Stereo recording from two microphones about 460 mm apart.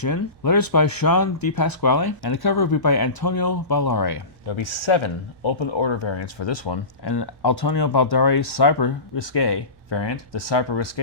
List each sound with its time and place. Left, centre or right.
0.0 s speech: left
4.4 s speech: left